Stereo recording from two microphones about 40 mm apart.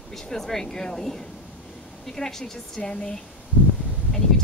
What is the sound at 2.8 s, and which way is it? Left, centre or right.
Speech, left.